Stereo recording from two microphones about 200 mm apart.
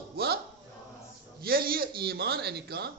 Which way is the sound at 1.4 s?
50° right (ahead or behind).